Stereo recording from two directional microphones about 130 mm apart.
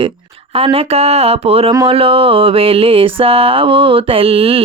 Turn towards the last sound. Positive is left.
turn(degrees=-45)  # may be behind; listen again after turning